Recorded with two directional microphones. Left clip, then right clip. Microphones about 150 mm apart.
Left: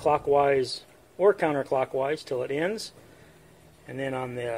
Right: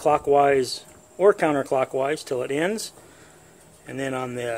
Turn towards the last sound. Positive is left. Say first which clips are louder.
# right 3 dB
turn(degrees=-40)  # may be behind; listen again after turning